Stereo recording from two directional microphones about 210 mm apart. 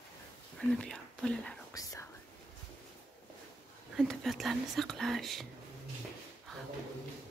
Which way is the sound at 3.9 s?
Centre (ahead or behind).